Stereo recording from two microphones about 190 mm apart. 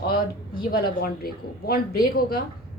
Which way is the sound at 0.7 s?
55° left (ahead or behind).